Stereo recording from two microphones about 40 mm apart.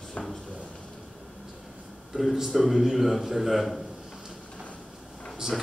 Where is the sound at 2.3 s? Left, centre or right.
Centre.